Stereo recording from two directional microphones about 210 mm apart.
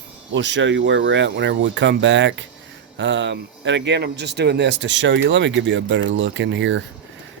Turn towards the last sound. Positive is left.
turn(degrees=-60)  # may be behind; listen again after turning